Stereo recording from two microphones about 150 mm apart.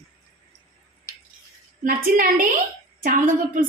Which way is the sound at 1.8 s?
70° right (ahead or behind).